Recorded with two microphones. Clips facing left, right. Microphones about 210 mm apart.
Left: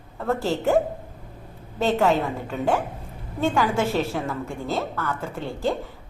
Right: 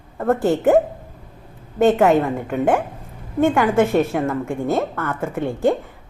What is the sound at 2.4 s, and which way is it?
Speech, 55° right (ahead or behind).